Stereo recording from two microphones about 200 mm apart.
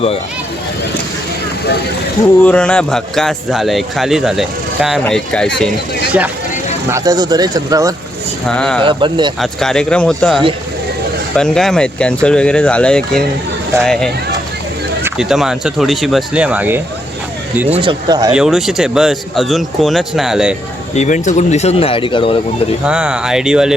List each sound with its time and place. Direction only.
2.4 s speech: 5° left (ahead or behind)
6.8 s speech: 15° right (ahead or behind)
8.4 s speech: 5° left (ahead or behind)
8.8 s speech: 25° right (ahead or behind)
9.4 s speech: centre (ahead or behind)
17.7 s speech: 20° right (ahead or behind)
18.3 s speech: centre (ahead or behind)
20.9 s speech: 35° left (ahead or behind)
22.9 s speech: 5° right (ahead or behind)